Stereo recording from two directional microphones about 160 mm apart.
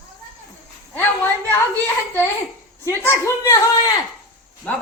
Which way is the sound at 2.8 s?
15° left (ahead or behind).